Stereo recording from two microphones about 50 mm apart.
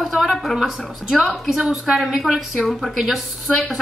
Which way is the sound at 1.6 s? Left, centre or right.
Right.